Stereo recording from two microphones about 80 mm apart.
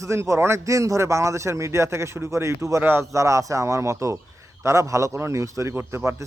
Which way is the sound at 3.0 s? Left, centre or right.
Right.